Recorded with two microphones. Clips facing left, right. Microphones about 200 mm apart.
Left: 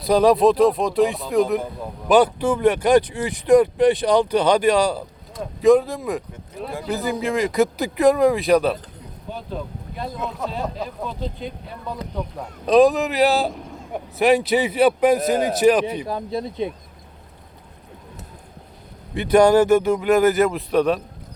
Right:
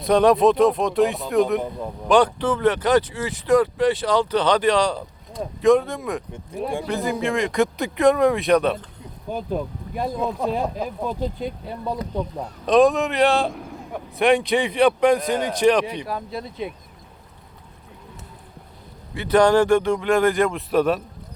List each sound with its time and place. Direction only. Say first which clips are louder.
0.0 s speech: left 1 dB; centre (ahead or behind)
6.3 s speech: right 4 dB; 30° right (ahead or behind)
6.8 s speech: left 3 dB; centre (ahead or behind)
9.5 s speech: right 3 dB; 55° right (ahead or behind)
12.6 s speech: left 1 dB; centre (ahead or behind)
16.0 s speech: left 3 dB; 20° left (ahead or behind)
19.1 s speech: left 2 dB; 15° left (ahead or behind); by 21.0 s centre (ahead or behind)